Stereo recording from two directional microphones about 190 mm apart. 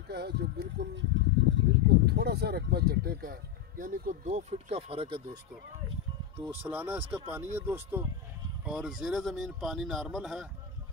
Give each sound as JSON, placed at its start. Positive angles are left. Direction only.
{"t": 0.1, "sound": "speech", "side_deg": -60}
{"t": 2.0, "sound": "speech", "side_deg": -60}
{"t": 6.5, "sound": "speech", "side_deg": -10}